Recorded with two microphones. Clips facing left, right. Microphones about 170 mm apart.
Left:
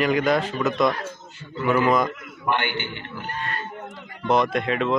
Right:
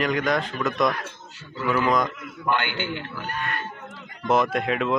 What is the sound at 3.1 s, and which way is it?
Speech, 30° left (ahead or behind).